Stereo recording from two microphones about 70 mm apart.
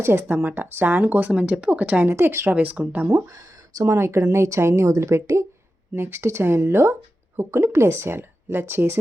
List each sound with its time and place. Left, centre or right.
0.0 s speech: right
2.0 s speech: right
2.5 s speech: right
3.2 s speech: right
3.8 s speech: right